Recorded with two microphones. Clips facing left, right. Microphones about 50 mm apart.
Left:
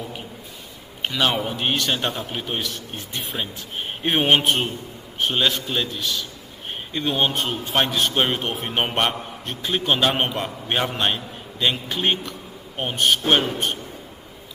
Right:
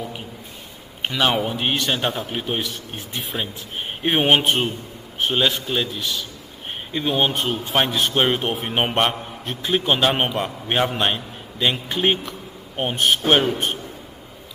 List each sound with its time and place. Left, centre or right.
1.0 s a man's voice: centre